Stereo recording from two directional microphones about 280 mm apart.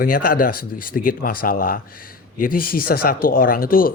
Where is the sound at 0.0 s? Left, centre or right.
Left.